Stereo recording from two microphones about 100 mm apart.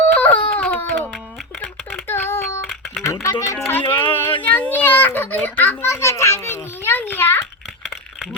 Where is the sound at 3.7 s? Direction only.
20° left (ahead or behind).